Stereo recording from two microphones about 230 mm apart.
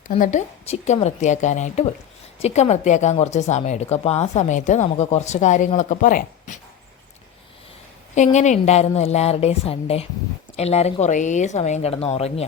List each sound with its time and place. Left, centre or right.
0.1 s speech: left
8.1 s a woman's voice: left